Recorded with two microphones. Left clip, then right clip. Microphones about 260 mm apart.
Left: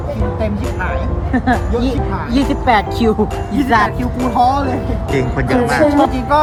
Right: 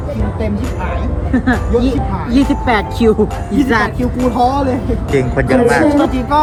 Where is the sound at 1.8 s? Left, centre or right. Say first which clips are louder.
Right 1 dB; left.